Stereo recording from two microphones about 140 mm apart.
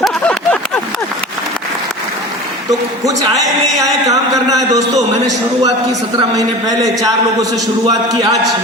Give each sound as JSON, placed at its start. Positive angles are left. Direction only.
{"t": 0.0, "sound": "a sound", "side_deg": 5}
{"t": 2.6, "sound": "a man's voice", "side_deg": -25}
{"t": 6.7, "sound": "a man's voice", "side_deg": -25}